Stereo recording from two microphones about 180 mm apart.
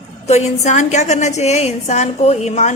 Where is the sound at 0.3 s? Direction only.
40° left (ahead or behind).